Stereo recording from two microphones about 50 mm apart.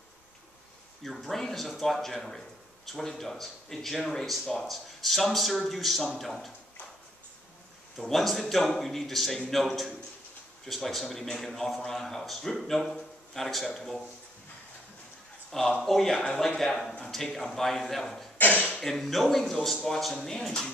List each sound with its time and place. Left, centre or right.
1.0 s a man's voice: centre
8.0 s a man's voice: centre
15.5 s a man's voice: centre
18.4 s a sound: left
18.8 s a man's voice: centre